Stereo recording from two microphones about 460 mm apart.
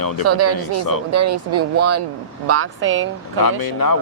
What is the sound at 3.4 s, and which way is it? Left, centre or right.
Speech, left.